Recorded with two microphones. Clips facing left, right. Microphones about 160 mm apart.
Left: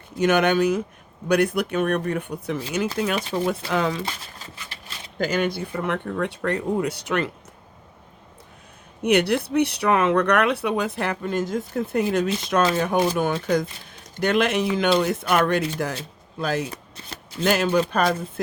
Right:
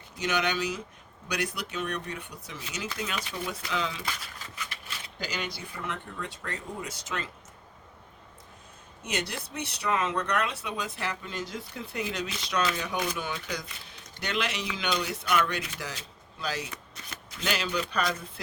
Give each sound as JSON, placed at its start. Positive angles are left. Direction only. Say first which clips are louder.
{"t": 0.2, "sound": "speech", "louder": "left 10 dB", "side_deg": 55}
{"t": 4.0, "sound": "crumpling", "louder": "left 4 dB", "side_deg": 30}
{"t": 5.1, "sound": "speech", "louder": "left 13 dB", "side_deg": 55}
{"t": 9.0, "sound": "speech", "louder": "left 15 dB", "side_deg": 65}
{"t": 16.7, "sound": "shuffling cards", "louder": "left 5 dB", "side_deg": 30}
{"t": 17.4, "sound": "speech", "louder": "left 11 dB", "side_deg": 50}